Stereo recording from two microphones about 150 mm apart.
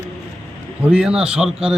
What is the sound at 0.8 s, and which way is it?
Speech, 5° right (ahead or behind).